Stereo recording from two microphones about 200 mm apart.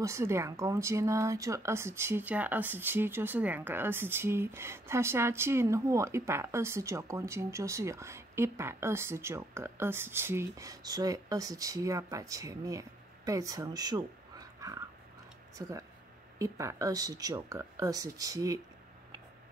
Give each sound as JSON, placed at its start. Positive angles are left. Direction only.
{"t": 0.0, "sound": "speech", "side_deg": -15}